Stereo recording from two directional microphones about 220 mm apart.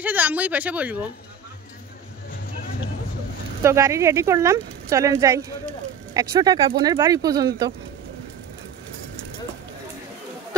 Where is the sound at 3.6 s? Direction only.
10° right (ahead or behind).